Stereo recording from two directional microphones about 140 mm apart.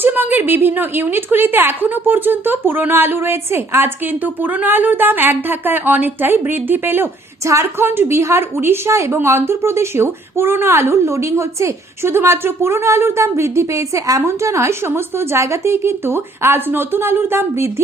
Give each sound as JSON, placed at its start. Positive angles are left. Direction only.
{"t": 0.0, "sound": "a woman's voice", "side_deg": -15}